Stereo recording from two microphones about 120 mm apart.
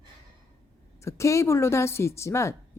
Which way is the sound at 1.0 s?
25° left (ahead or behind).